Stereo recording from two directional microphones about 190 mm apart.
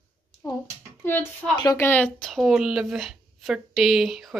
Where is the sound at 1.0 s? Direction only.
10° left (ahead or behind).